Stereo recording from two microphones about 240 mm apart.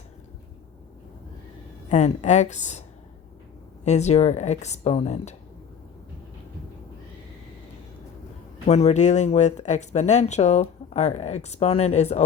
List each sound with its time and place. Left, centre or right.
1.9 s speech: left
3.8 s speech: left
8.6 s speech: left